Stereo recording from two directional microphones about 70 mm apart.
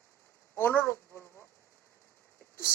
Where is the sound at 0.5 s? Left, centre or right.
Left.